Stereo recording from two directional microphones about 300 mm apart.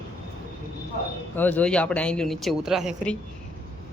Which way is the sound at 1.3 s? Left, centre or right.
Centre.